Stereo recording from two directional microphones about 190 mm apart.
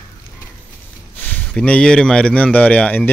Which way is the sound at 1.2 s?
10° left (ahead or behind).